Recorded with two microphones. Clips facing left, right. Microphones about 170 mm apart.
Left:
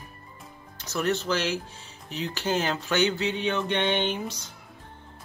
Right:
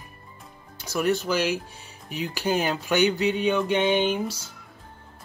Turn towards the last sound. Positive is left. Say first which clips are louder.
# right 4 dB
turn(degrees=-10)  # may be behind; listen again after turning